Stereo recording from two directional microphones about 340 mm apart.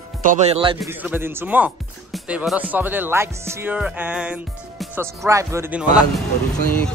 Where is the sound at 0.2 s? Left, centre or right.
Right.